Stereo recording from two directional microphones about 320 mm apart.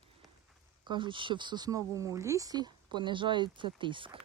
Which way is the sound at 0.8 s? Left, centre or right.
Centre.